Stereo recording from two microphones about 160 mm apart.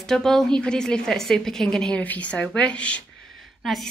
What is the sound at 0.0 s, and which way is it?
A woman's voice, centre (ahead or behind).